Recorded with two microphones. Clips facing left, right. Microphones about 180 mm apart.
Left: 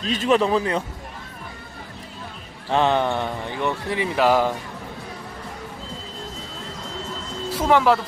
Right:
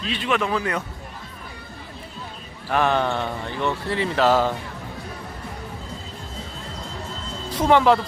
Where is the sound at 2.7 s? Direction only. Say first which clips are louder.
Left 1 dB; 20° left (ahead or behind).